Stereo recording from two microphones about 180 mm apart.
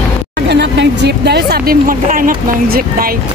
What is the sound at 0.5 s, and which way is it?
Speech, 75° right (ahead or behind).